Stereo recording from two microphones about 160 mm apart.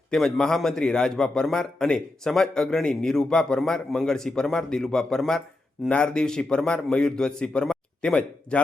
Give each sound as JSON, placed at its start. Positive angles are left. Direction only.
{"t": 0.1, "sound": "a man's voice", "side_deg": 5}